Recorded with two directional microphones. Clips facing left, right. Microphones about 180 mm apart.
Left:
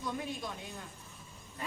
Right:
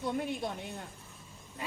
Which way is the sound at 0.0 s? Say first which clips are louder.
Right 4 dB; 60° right (ahead or behind).